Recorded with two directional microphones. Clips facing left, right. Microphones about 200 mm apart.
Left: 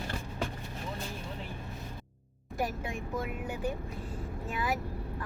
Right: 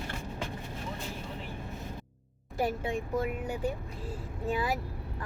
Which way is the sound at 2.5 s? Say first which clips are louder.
Right 4 dB; 25° right (ahead or behind).